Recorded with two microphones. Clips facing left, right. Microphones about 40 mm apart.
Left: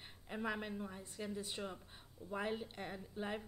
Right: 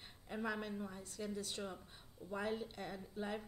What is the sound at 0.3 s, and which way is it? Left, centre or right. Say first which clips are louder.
Speech: even; centre.